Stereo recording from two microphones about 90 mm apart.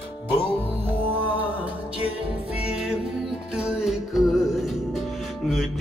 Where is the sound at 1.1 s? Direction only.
20° right (ahead or behind).